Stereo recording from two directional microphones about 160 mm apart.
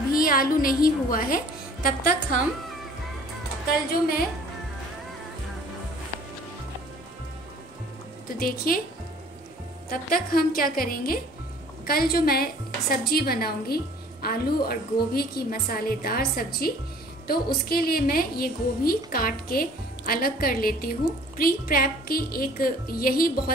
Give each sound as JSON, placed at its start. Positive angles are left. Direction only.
{"t": 0.1, "sound": "a woman's voice", "side_deg": 60}
{"t": 8.4, "sound": "a woman's voice", "side_deg": 65}
{"t": 9.8, "sound": "a woman's voice", "side_deg": 70}